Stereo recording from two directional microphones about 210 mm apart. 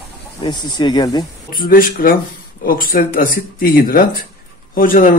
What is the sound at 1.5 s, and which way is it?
Speech, 40° left (ahead or behind).